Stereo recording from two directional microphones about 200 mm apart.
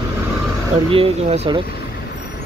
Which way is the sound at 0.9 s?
30° right (ahead or behind).